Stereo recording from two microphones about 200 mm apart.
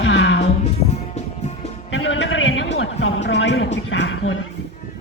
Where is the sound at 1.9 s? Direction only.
70° left (ahead or behind).